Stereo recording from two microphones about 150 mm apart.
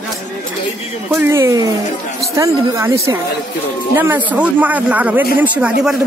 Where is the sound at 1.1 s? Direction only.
15° right (ahead or behind).